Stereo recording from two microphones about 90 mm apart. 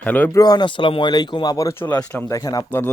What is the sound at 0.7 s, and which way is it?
Speech, 70° left (ahead or behind).